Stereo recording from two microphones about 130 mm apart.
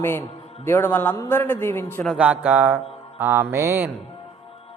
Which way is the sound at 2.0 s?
5° right (ahead or behind).